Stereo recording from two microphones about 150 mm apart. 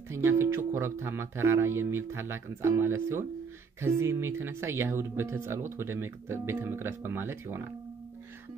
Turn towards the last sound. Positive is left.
turn(degrees=-15)  # may be behind; listen again after turning